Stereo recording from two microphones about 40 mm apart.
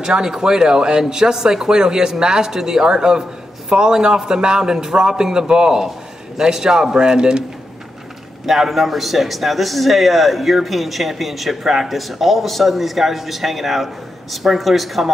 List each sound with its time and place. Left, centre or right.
0.0 s speech: centre
8.5 s a man's voice: centre